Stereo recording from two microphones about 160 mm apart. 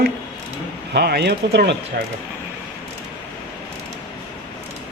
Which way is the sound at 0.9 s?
90° right.